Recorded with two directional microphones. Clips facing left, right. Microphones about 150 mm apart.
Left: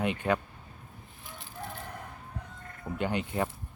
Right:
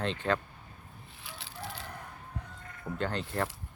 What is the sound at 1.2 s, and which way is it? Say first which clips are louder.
Chicken: left 1 dB; 85° right.